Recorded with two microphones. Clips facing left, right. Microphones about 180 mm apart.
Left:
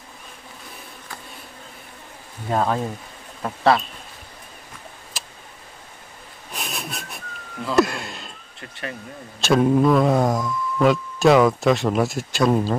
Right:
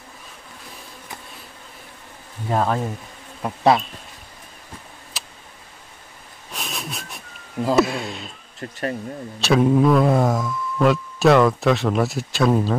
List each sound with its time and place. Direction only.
2.5 s speech: centre (ahead or behind)
3.4 s bee: 20° right (ahead or behind)
5.1 s tick: centre (ahead or behind)
6.5 s a sound: centre (ahead or behind)
7.7 s speech: centre (ahead or behind)
8.5 s speech: 40° right (ahead or behind)
9.4 s speech: centre (ahead or behind)